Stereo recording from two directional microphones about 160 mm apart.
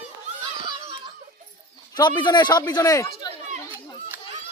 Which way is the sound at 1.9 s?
25° left (ahead or behind).